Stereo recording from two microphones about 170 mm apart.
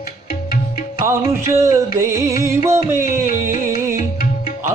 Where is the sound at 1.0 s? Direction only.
15° right (ahead or behind).